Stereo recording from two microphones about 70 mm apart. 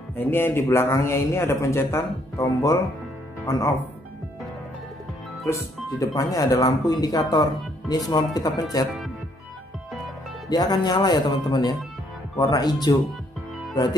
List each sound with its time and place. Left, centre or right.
0.1 s a man's voice: left
5.4 s speech: left
10.5 s speech: left
12.4 s speech: left